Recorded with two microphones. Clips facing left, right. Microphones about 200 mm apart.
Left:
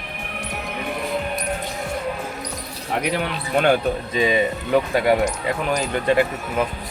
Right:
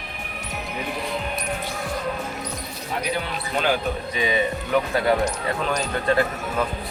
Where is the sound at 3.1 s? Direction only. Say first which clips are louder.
Left 4 dB; 70° left (ahead or behind).